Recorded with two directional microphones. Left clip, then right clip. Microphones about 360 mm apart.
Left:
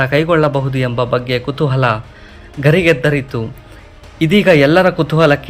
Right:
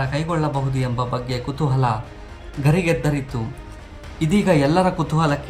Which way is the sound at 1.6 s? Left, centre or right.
Centre.